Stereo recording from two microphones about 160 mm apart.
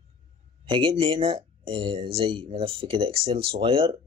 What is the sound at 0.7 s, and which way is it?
Speech, 35° right (ahead or behind).